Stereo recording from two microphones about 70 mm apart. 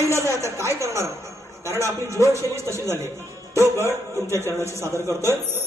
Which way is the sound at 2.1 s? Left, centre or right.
Right.